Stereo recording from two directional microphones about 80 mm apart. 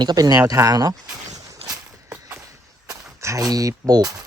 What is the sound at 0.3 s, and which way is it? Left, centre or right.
Speech, right.